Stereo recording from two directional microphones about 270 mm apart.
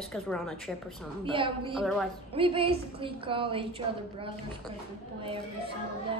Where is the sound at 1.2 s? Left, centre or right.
Centre.